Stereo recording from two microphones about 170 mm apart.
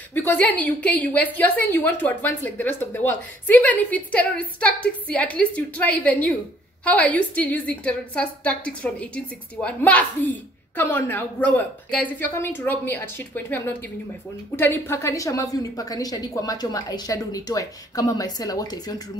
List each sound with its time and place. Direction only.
0.1 s a woman's voice: 10° left (ahead or behind)